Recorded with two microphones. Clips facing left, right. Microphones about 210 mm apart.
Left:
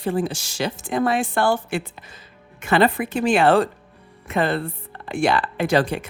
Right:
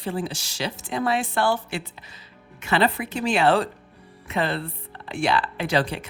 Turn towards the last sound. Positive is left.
turn(degrees=50)  # may be behind; listen again after turning